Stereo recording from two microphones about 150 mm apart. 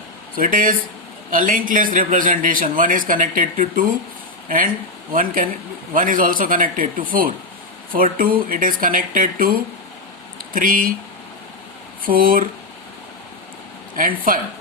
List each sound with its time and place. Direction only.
0.3 s a man's voice: 70° right (ahead or behind)
12.0 s speech: 70° right (ahead or behind)
14.3 s speech: 65° right (ahead or behind)